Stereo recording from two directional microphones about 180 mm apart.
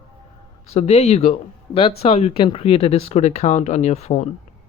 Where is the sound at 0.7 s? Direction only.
35° left (ahead or behind).